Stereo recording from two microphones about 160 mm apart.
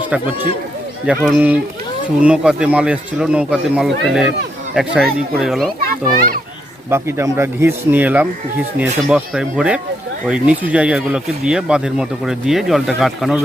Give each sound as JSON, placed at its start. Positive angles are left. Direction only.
{"t": 1.0, "sound": "speech", "side_deg": -5}
{"t": 5.8, "sound": "a child's voice", "side_deg": -65}
{"t": 6.9, "sound": "speech", "side_deg": -15}